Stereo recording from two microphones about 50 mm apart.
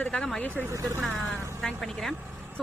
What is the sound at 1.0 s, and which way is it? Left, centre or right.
Speech, centre.